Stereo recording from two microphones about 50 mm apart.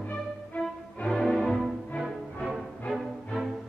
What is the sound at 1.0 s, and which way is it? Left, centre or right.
Music, centre.